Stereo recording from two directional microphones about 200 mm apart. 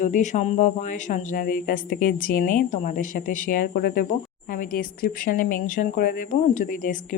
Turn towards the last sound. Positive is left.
turn(degrees=40)  # may be behind; listen again after turning